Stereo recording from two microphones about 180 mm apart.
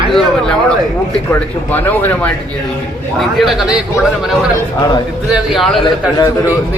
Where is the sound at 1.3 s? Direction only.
10° left (ahead or behind).